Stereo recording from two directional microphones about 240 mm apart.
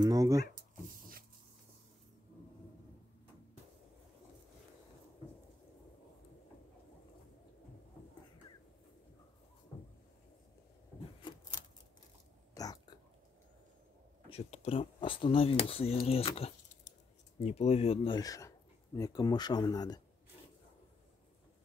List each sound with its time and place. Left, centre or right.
0.0 s speech: centre
12.5 s a sound: centre
14.3 s speech: left